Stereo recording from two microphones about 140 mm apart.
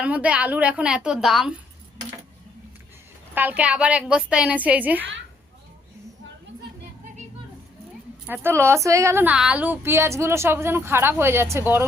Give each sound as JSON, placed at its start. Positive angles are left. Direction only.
{"t": 0.0, "sound": "a woman's voice", "side_deg": -10}
{"t": 3.3, "sound": "a woman's voice", "side_deg": -10}
{"t": 8.3, "sound": "a woman's voice", "side_deg": -15}